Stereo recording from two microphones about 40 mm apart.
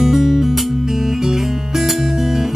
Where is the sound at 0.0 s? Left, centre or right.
Centre.